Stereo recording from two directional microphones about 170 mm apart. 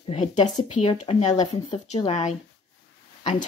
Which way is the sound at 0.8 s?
30° left (ahead or behind).